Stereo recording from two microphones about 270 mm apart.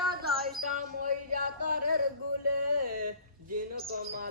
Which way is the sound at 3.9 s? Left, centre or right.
Right.